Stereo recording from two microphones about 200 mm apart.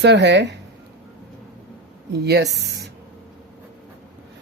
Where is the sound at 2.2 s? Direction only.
60° right (ahead or behind).